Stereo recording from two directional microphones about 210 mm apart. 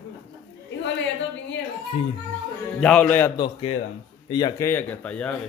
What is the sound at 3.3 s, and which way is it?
A man's voice, 25° left (ahead or behind).